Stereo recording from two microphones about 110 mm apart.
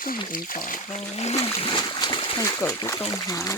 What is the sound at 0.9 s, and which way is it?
Speech, 80° left.